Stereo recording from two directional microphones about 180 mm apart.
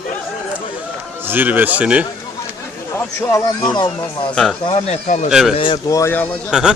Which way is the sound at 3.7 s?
25° left (ahead or behind).